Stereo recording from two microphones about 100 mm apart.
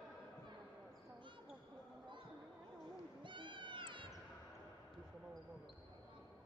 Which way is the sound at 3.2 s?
55° right (ahead or behind).